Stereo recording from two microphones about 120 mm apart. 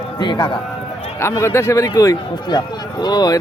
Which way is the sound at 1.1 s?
20° left (ahead or behind).